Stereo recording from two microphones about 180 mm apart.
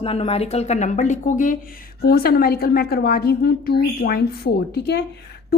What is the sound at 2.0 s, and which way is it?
A woman's voice, 60° left (ahead or behind).